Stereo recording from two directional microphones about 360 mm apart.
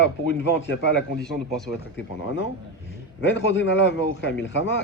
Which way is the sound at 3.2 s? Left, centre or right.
Left.